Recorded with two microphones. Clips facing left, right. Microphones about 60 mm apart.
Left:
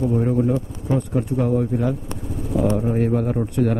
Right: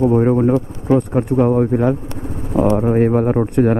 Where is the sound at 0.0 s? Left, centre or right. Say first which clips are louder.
Right 6 dB; right.